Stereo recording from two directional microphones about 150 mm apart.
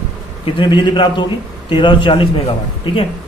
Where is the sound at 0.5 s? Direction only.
30° left (ahead or behind).